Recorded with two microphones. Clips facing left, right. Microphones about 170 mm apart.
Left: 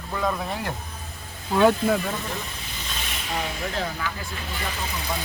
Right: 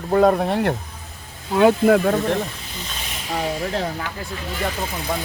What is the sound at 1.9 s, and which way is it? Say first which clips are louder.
Speech: right 9 dB; 60° right (ahead or behind).